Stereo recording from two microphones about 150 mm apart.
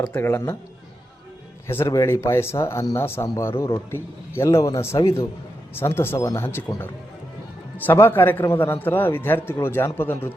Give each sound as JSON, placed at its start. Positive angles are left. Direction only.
{"t": 0.1, "sound": "speech", "side_deg": 15}
{"t": 1.6, "sound": "speech", "side_deg": 15}